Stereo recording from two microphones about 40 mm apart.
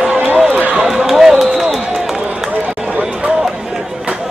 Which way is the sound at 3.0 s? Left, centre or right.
Centre.